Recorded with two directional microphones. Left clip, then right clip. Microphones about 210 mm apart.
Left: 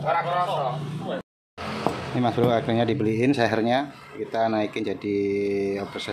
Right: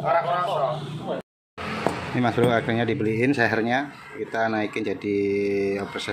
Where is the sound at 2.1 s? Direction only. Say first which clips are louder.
Right 1 dB; centre (ahead or behind).